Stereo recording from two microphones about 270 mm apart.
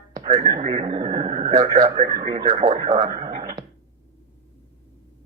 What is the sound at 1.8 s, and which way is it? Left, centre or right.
Speech, right.